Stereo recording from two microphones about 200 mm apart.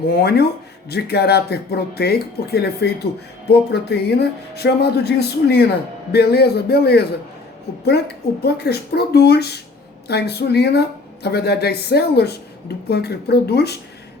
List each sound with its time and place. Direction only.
0.1 s speech: 50° left (ahead or behind)